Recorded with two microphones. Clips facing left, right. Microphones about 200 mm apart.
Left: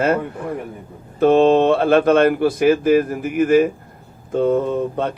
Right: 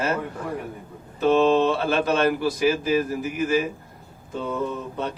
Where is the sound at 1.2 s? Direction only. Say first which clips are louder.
Left 5 dB; 55° left (ahead or behind).